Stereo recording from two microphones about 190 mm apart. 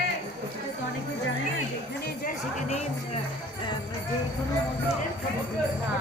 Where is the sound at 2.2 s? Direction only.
35° left (ahead or behind).